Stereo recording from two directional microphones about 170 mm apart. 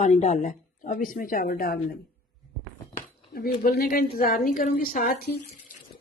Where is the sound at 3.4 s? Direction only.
65° left (ahead or behind).